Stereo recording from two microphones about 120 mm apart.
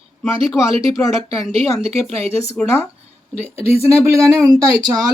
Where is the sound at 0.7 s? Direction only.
55° right (ahead or behind).